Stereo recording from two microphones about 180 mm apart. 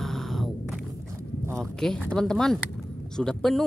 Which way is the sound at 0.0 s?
Centre (ahead or behind).